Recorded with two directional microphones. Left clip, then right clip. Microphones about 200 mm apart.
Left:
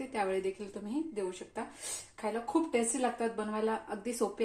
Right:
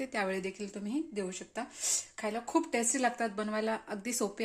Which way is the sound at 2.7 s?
60° right (ahead or behind).